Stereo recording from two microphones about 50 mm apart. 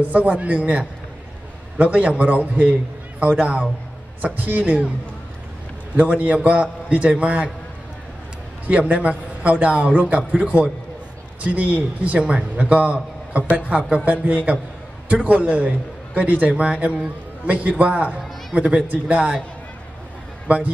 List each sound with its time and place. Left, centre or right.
0.0 s a man's voice: right
5.9 s a man's voice: right
8.6 s a man's voice: right
11.4 s a man's voice: right
13.4 s a woman's voice: left
13.7 s a man's voice: right
20.4 s speech: right